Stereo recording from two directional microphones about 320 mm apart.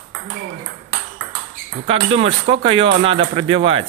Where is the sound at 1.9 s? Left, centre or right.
Centre.